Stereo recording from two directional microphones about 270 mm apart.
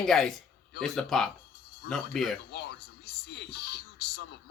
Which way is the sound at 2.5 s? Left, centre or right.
Left.